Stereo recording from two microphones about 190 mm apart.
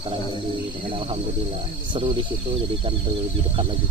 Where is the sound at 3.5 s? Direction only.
25° right (ahead or behind).